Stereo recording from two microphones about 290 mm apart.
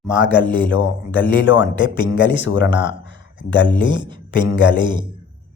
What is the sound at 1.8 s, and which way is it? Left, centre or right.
Speech, centre.